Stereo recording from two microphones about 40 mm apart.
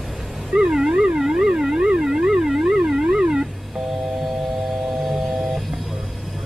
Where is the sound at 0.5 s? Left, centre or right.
Centre.